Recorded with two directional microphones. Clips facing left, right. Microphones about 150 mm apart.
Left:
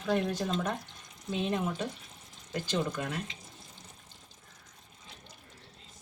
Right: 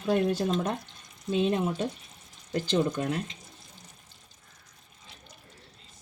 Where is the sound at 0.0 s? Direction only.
30° right (ahead or behind).